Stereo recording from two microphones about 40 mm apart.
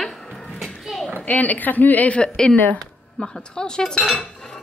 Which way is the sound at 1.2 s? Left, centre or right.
Left.